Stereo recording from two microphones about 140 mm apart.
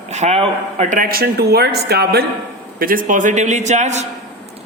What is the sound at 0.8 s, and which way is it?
Speech, 80° right.